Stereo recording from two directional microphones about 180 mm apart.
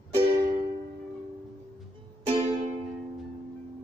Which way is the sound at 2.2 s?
35° right (ahead or behind).